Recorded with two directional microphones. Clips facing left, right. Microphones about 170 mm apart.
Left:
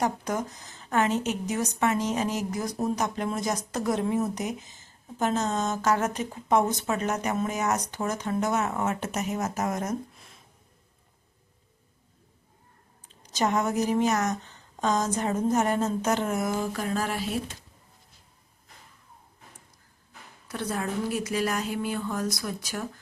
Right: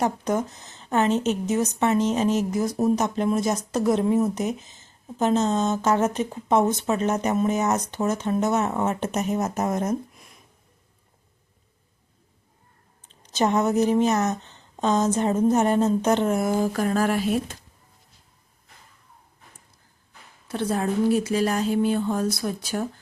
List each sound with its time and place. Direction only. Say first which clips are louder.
0.0 s speech: right 4 dB; 25° right (ahead or behind)
13.3 s speech: right 4 dB; 25° right (ahead or behind)
16.7 s mantra: right 7 dB; 50° right (ahead or behind)
20.5 s speech: right 6 dB; 30° right (ahead or behind)